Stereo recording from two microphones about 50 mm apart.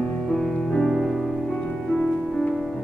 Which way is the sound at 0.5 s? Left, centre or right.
Centre.